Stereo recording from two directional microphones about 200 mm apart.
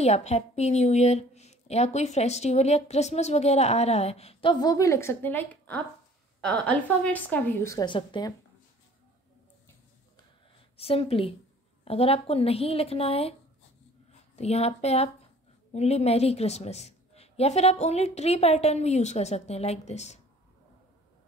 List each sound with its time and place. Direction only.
0.0 s a woman's voice: 30° left (ahead or behind)
10.8 s a woman's voice: 30° left (ahead or behind)